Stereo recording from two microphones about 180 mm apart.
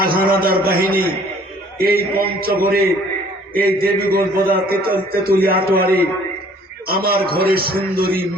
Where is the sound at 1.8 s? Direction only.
55° right (ahead or behind).